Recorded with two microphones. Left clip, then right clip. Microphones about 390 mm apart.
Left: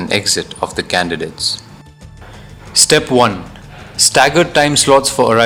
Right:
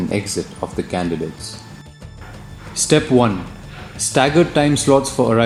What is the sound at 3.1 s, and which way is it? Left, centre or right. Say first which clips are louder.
Speech: left 4 dB; left.